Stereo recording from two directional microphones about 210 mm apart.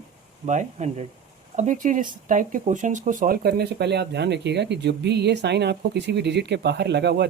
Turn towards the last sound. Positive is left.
turn(degrees=-50)  # may be behind; listen again after turning